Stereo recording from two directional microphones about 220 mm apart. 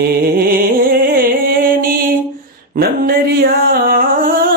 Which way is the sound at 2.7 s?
40° right (ahead or behind).